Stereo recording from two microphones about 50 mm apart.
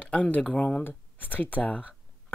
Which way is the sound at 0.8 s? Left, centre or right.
Left.